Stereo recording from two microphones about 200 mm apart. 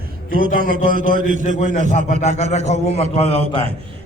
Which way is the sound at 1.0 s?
45° right (ahead or behind).